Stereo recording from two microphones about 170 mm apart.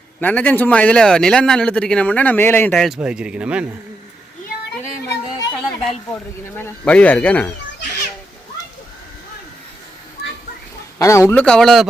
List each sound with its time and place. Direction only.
0.2 s speech: 10° left (ahead or behind); by 3.7 s 5° right (ahead or behind)
4.8 s music: 15° left (ahead or behind)
6.6 s speech: 10° left (ahead or behind)
10.9 s speech: 15° left (ahead or behind); by 11.9 s centre (ahead or behind)